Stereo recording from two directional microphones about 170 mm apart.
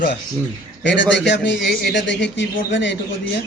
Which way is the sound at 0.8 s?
90° left.